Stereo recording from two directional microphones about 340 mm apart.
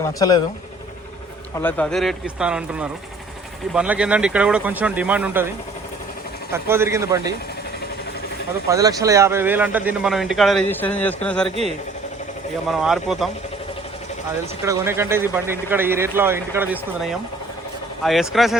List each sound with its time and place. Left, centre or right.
0.0 s speech: centre
1.5 s a man's voice: centre
6.5 s speech: centre
8.7 s a man's voice: centre
12.6 s a man's voice: centre
14.6 s a man's voice: centre